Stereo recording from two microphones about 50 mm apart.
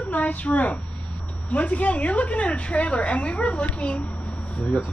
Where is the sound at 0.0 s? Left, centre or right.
Left.